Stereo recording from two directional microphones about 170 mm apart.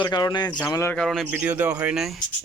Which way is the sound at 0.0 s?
25° left (ahead or behind).